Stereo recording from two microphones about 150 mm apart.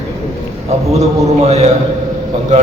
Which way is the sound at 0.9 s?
45° right (ahead or behind).